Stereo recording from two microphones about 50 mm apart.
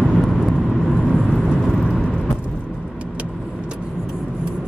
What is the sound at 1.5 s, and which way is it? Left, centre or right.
Vehicle, centre.